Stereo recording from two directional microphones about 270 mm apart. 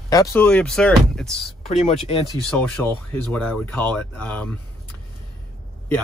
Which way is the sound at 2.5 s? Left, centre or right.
Centre.